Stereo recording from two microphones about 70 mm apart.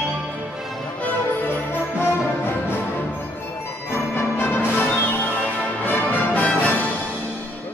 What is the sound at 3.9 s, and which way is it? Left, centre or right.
Music, left.